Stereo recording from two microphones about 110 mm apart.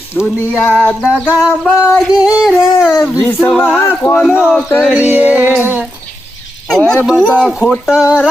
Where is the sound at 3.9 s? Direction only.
20° left (ahead or behind).